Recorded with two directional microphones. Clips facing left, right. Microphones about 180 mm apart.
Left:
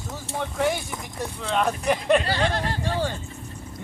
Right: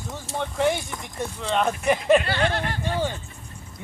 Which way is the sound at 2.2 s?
35° left (ahead or behind).